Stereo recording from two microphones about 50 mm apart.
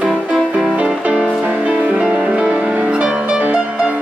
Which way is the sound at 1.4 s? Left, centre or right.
Right.